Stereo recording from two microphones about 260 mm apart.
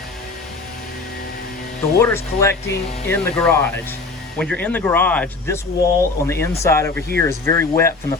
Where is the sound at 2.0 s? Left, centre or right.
Centre.